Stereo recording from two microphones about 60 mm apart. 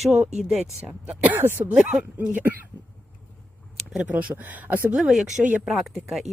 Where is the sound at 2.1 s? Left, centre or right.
Right.